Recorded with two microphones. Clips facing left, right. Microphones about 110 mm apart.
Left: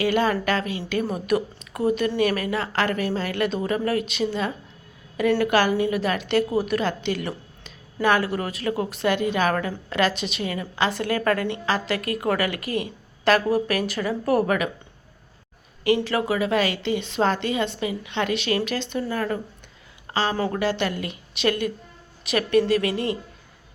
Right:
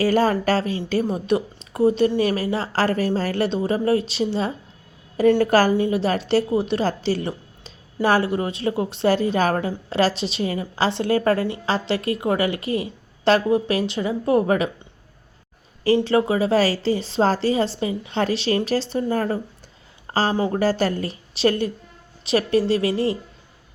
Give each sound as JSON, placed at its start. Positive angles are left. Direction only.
{"t": 0.0, "sound": "a woman's voice", "side_deg": -40}
{"t": 16.0, "sound": "a woman's voice", "side_deg": -25}
{"t": 20.1, "sound": "a sound", "side_deg": -40}
{"t": 20.5, "sound": "a woman's voice", "side_deg": -40}